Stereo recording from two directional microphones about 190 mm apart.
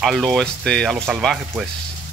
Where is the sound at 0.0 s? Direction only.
Centre (ahead or behind).